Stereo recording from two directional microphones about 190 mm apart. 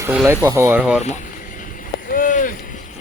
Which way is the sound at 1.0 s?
40° left (ahead or behind).